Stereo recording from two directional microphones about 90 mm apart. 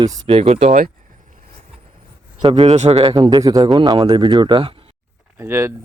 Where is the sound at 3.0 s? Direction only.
55° right (ahead or behind); by 4.9 s 75° right (ahead or behind).